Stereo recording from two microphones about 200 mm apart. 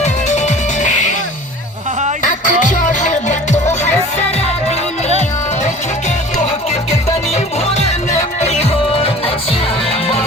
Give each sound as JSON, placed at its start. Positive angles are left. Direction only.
{"t": 0.0, "sound": "music", "side_deg": 35}
{"t": 2.2, "sound": "music", "side_deg": 40}
{"t": 8.4, "sound": "music", "side_deg": 35}